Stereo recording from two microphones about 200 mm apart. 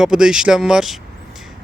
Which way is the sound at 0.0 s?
5° right (ahead or behind).